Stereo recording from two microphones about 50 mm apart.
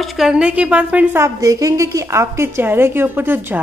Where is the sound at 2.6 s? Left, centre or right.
Right.